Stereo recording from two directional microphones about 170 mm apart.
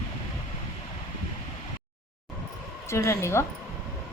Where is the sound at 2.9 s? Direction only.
15° left (ahead or behind).